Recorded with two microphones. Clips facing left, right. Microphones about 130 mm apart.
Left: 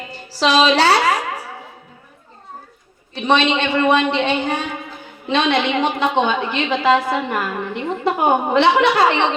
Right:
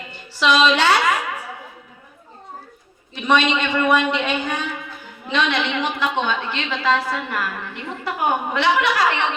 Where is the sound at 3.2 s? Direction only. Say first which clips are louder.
Left 2 dB; 30° left (ahead or behind).